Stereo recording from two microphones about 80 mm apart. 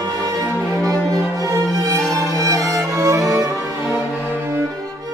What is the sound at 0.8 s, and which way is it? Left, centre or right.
Music, right.